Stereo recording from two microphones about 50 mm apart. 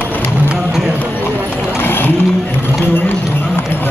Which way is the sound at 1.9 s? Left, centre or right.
Left.